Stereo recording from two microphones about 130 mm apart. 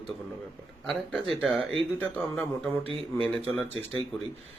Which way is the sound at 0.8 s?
Centre (ahead or behind).